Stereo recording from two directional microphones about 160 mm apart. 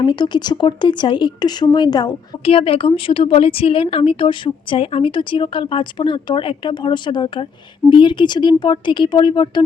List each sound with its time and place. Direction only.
0.0 s speech: 30° left (ahead or behind)
2.4 s a woman's voice: 35° left (ahead or behind)